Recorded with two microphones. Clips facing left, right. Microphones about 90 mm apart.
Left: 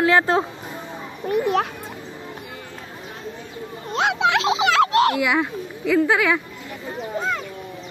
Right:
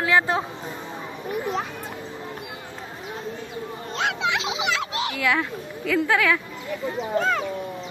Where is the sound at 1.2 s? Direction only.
65° left (ahead or behind).